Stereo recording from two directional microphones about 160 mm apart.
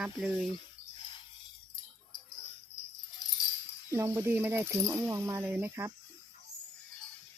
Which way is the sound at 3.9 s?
20° right (ahead or behind).